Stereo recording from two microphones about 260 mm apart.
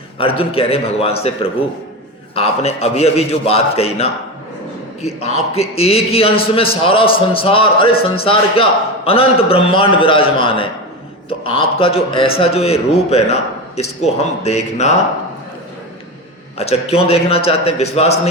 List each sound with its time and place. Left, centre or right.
0.2 s a man's voice: left
16.6 s a man's voice: left